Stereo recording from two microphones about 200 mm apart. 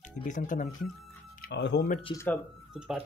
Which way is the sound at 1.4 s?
60° left (ahead or behind).